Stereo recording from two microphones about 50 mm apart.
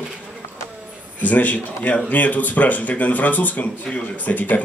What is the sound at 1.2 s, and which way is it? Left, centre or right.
A man's voice, left.